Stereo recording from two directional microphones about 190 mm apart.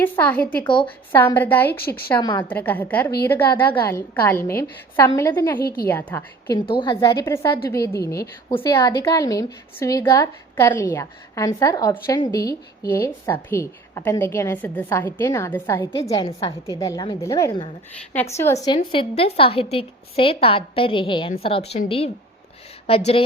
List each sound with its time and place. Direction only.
0.0 s a woman's voice: 10° left (ahead or behind)
0.6 s a woman's voice: 25° left (ahead or behind)
1.1 s a woman's voice: 10° left (ahead or behind)
2.1 s a woman's voice: 20° left (ahead or behind)
2.5 s a woman's voice: 10° left (ahead or behind)
5.6 s a woman's voice: 50° left (ahead or behind)
5.9 s a woman's voice: 10° left (ahead or behind)
6.7 s a woman's voice: 25° left (ahead or behind)